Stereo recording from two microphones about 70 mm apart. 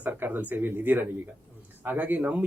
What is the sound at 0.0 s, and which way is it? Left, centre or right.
Speech, right.